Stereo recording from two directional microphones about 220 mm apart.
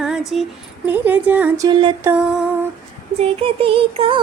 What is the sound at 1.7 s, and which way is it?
Music, 25° right (ahead or behind).